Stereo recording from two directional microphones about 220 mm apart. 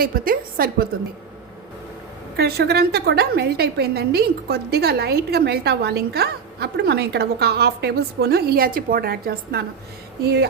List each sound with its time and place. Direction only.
0.0 s a woman's voice: 40° right (ahead or behind)
2.3 s a woman's voice: 45° right (ahead or behind)